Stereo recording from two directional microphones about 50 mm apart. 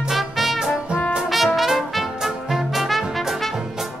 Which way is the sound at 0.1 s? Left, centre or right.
Centre.